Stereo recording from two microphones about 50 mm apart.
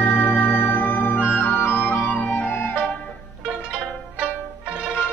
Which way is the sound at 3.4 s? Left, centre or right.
Centre.